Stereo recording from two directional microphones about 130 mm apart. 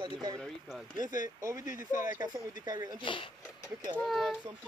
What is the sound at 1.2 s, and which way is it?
Speech, 25° right (ahead or behind).